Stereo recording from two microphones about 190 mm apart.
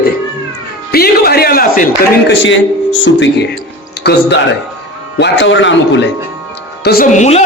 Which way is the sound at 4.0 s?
60° left (ahead or behind).